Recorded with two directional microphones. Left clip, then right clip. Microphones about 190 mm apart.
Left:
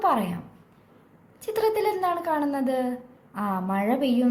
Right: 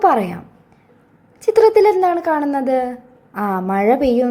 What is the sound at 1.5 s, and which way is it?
A woman's voice, 30° right (ahead or behind).